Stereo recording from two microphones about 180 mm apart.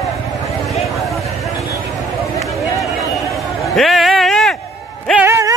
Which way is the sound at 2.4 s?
Centre (ahead or behind).